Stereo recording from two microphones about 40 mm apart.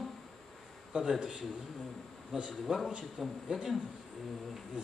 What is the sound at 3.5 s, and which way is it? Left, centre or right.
Speech, centre.